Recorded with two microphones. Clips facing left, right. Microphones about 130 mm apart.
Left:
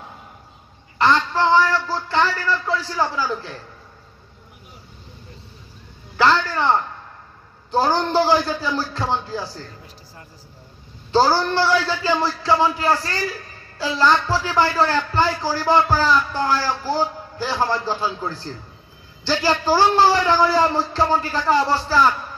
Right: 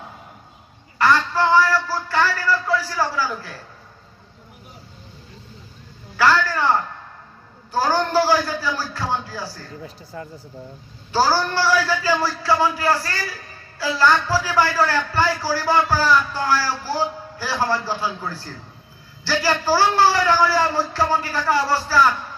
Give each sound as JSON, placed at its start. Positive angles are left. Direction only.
{"t": 0.9, "sound": "a sound", "side_deg": 20}
{"t": 6.1, "sound": "speech", "side_deg": 25}
{"t": 11.1, "sound": "speech", "side_deg": 25}